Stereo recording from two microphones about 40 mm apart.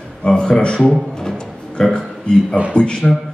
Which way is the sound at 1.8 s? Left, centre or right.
Centre.